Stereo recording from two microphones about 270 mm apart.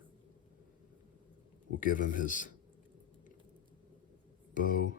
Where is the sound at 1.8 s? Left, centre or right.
Left.